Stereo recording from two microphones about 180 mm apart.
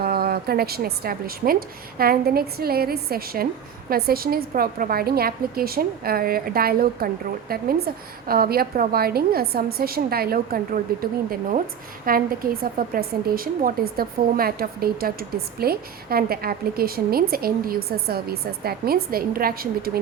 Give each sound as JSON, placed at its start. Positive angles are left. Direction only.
{"t": 0.0, "sound": "a woman's voice", "side_deg": -55}
{"t": 12.0, "sound": "a woman's voice", "side_deg": -55}